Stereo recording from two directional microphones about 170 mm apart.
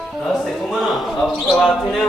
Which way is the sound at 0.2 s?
Centre (ahead or behind).